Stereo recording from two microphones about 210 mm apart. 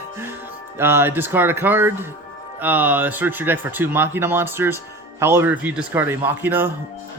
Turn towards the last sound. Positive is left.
turn(degrees=-10)  # may be behind; listen again after turning